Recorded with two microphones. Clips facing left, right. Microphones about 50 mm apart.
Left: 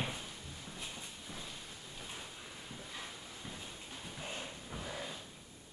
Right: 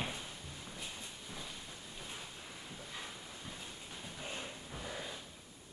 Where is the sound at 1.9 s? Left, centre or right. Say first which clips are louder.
Left 1 dB; centre.